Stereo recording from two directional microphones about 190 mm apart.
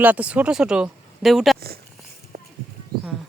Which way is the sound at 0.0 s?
10° right (ahead or behind).